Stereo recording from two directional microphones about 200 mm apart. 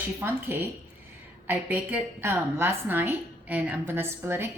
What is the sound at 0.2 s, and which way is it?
A woman's voice, 10° right (ahead or behind).